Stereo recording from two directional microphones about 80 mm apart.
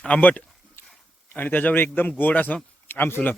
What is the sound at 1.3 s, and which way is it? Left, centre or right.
A man's voice, left.